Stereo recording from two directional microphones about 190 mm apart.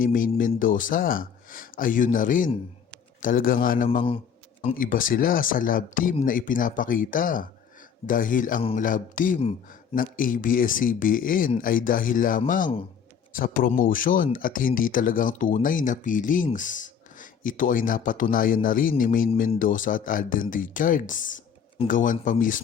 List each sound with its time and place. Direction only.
0.0 s speech: 45° left (ahead or behind)